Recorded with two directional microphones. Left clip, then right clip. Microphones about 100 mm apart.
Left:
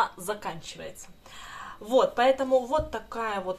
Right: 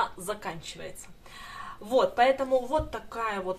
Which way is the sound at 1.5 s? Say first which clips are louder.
Left 2 dB; 20° left (ahead or behind).